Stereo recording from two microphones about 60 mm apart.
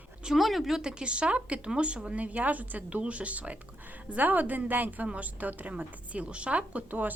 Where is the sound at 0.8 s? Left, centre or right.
Centre.